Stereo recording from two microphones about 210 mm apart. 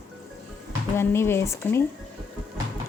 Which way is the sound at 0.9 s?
10° left (ahead or behind).